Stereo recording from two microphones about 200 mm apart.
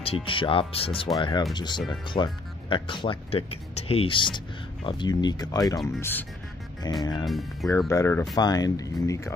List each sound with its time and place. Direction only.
0.0 s speech: 25° left (ahead or behind)
7.2 s speech: centre (ahead or behind)
7.9 s speech: 15° left (ahead or behind)